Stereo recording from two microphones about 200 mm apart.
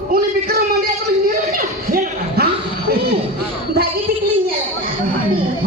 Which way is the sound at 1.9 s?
50° right (ahead or behind).